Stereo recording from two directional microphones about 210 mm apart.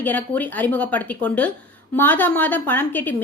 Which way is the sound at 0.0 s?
10° left (ahead or behind).